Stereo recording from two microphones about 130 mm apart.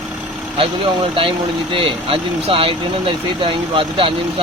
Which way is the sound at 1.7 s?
45° right (ahead or behind).